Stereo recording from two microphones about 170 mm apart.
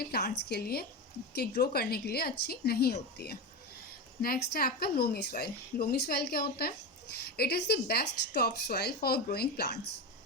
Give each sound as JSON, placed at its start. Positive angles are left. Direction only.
{"t": 0.0, "sound": "a woman's voice", "side_deg": 65}